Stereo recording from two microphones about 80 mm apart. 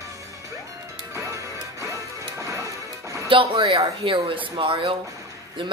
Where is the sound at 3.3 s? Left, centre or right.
Right.